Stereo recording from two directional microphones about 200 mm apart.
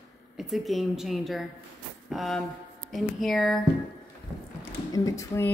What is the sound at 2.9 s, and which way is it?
Speech, centre (ahead or behind).